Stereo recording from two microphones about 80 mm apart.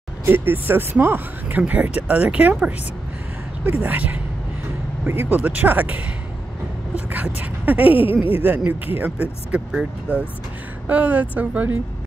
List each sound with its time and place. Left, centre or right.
0.2 s speech: right
7.1 s speech: right